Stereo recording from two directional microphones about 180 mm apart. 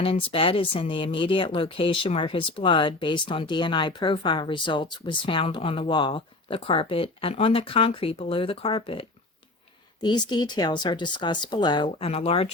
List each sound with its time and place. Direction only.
0.0 s speech: 30° left (ahead or behind)